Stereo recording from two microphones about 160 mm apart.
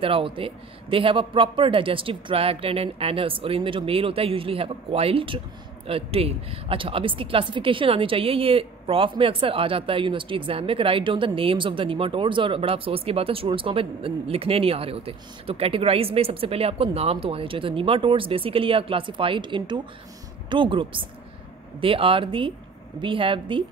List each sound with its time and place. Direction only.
0.0 s a woman's voice: 35° right (ahead or behind)